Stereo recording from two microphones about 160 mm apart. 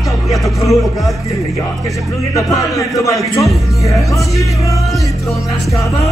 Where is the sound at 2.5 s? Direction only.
20° left (ahead or behind).